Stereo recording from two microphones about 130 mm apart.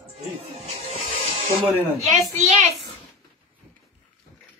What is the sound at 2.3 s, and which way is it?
Speech, 60° right (ahead or behind).